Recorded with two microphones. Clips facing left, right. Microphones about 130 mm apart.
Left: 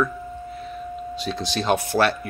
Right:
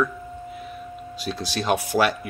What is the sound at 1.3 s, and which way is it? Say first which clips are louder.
Speech: left 1 dB; 5° right (ahead or behind).